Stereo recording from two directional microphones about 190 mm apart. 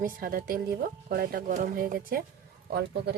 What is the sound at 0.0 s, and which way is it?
Speech, 50° right (ahead or behind).